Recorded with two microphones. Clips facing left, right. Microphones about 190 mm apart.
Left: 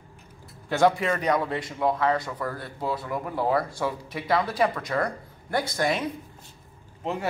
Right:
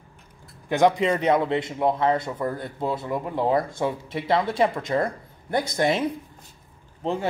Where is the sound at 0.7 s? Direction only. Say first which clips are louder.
Right 2 dB; 20° right (ahead or behind).